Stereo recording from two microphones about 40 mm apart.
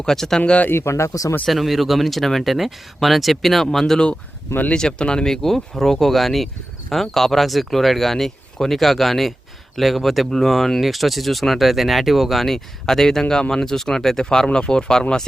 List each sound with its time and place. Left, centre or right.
0.0 s speech: centre
0.7 s speech: left
1.5 s speech: centre
4.7 s speech: centre